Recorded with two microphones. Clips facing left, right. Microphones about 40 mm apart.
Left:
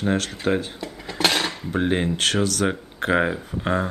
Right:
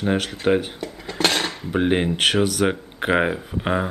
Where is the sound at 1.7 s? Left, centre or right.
Centre.